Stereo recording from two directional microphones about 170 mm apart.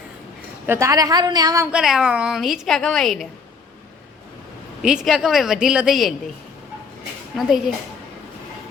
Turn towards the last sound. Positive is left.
turn(degrees=0)  # may be behind; listen again after turning